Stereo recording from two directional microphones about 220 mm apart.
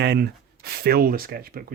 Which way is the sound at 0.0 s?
45° right (ahead or behind).